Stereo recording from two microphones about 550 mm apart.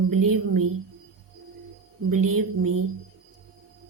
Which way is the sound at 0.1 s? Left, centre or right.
Right.